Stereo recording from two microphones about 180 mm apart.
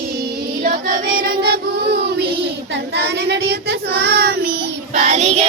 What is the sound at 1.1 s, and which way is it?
Choir, 60° right (ahead or behind).